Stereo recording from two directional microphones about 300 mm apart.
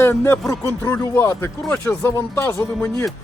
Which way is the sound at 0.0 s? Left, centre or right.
Centre.